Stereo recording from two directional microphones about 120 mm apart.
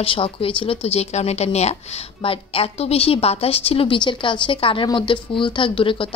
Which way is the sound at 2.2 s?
50° left (ahead or behind).